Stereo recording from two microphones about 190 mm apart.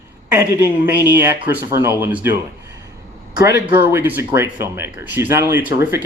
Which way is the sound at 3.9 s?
10° right (ahead or behind).